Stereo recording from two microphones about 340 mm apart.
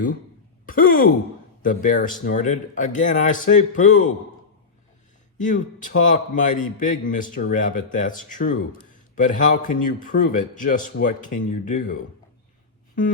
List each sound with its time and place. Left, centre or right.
0.6 s a sound: left
1.6 s a man's voice: left
5.4 s a man's voice: left